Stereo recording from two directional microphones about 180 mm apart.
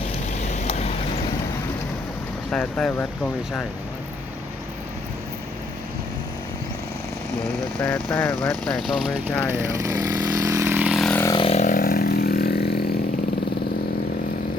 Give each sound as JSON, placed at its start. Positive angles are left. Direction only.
{"t": 0.4, "sound": "vehicle", "side_deg": 40}
{"t": 2.5, "sound": "speech", "side_deg": 5}
{"t": 7.8, "sound": "speech", "side_deg": 10}
{"t": 9.5, "sound": "vehicle", "side_deg": -15}
{"t": 11.3, "sound": "vehicle", "side_deg": 30}
{"t": 11.6, "sound": "chainsaw", "side_deg": 50}